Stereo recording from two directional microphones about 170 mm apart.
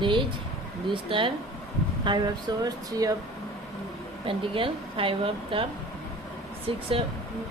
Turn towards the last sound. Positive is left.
turn(degrees=-30)  # may be behind; listen again after turning